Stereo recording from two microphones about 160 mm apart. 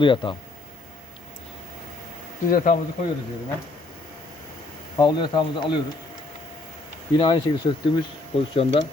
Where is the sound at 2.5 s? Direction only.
60° left (ahead or behind).